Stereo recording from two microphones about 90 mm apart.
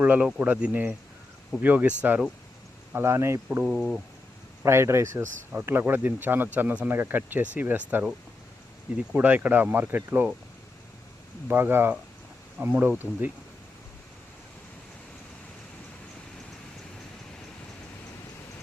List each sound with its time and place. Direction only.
0.0 s speech: 15° right (ahead or behind)
2.9 s speech: 30° right (ahead or behind)
3.6 s speech: 10° right (ahead or behind)
4.6 s speech: 30° right (ahead or behind)
9.1 s speech: 20° right (ahead or behind)
11.4 s speech: 25° right (ahead or behind)